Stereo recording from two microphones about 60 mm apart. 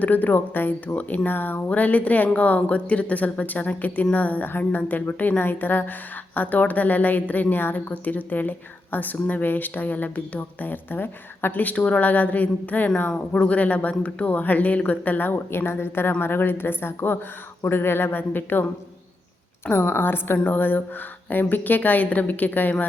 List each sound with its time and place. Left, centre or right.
0.0 s a woman's voice: left
19.6 s a woman's voice: left